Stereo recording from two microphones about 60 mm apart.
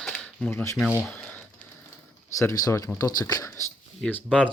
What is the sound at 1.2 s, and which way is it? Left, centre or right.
Typing, left.